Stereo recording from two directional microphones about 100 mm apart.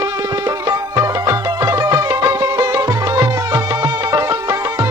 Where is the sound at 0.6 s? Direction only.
35° right (ahead or behind).